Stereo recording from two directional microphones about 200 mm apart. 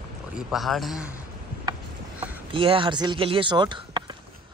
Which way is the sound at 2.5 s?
25° right (ahead or behind).